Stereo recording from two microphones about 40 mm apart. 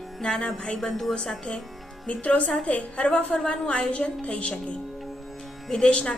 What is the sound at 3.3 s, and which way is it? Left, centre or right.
Speech, left.